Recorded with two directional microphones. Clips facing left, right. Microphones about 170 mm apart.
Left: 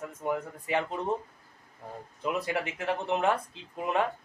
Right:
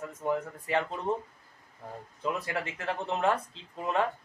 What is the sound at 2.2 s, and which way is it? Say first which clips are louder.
Speech: left 2 dB; 20° left (ahead or behind).